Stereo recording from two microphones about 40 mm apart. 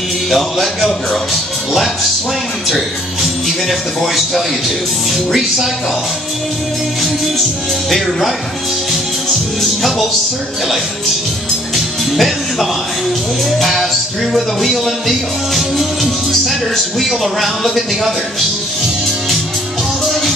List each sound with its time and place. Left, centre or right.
0.3 s music: centre
2.7 s music: centre
9.6 s music: centre
11.7 s music: centre
20.1 s music: centre